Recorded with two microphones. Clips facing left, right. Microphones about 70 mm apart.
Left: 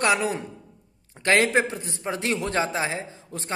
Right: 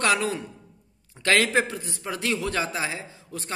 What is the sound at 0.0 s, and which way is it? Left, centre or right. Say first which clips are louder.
A man's voice: left 1 dB; left.